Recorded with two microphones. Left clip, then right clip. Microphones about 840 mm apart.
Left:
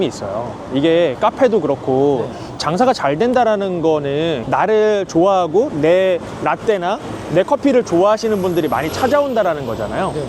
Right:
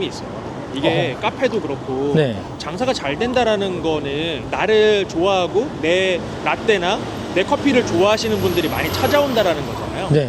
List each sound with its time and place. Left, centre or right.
0.8 s speech: left
2.7 s speech: left